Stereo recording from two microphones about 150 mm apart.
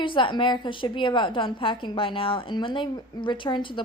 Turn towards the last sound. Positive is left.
turn(degrees=30)  # may be behind; listen again after turning